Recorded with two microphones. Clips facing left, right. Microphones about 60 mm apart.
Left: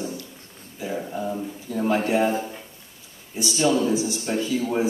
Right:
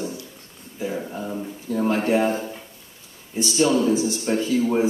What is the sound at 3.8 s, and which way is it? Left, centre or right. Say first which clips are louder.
Speech: right 2 dB; right.